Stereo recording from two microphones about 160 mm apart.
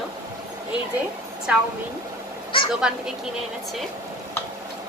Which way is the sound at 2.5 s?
35° left (ahead or behind).